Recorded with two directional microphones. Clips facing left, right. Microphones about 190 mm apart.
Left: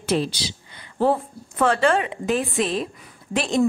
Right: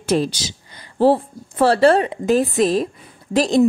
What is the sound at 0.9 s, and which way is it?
A woman's voice, 30° right (ahead or behind).